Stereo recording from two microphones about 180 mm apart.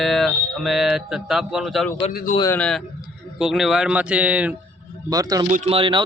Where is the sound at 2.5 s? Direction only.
5° left (ahead or behind).